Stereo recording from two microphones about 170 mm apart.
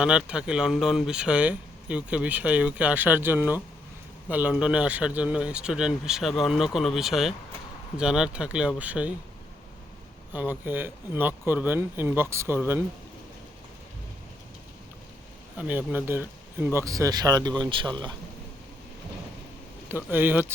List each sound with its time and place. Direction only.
0.0 s speech: 5° right (ahead or behind)
10.3 s speech: 10° right (ahead or behind)
15.5 s speech: 10° right (ahead or behind); by 17.9 s 30° right (ahead or behind)
20.1 s speech: 10° right (ahead or behind)